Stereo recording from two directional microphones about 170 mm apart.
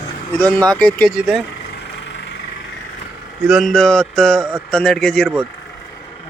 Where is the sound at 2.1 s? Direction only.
90° left.